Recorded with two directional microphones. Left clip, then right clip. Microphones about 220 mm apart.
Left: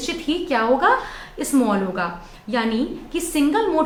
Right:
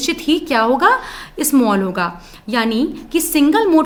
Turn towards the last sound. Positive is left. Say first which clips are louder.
# right 6 dB
turn(degrees=-50)  # may be behind; listen again after turning